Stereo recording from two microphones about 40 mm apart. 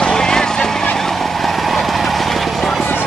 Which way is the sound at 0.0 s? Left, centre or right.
Centre.